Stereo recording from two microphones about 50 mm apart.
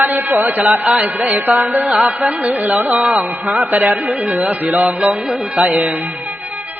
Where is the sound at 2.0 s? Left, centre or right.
Right.